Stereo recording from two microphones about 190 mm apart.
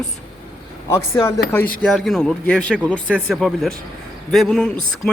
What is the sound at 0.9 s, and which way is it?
Speech, 15° left (ahead or behind).